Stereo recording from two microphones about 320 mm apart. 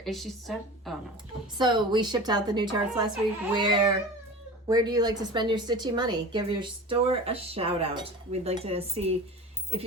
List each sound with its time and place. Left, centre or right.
0.0 s a woman's voice: centre
1.5 s a woman's voice: centre